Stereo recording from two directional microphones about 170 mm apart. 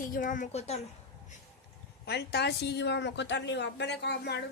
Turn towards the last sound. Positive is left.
turn(degrees=80)